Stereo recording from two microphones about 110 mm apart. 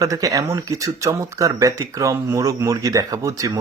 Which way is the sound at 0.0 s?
30° right (ahead or behind).